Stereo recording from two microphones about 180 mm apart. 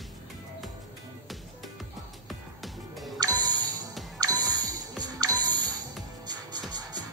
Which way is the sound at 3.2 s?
20° right (ahead or behind).